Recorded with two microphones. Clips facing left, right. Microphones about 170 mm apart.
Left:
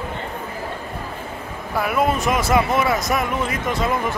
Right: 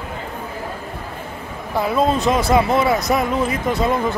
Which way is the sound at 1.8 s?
25° right (ahead or behind).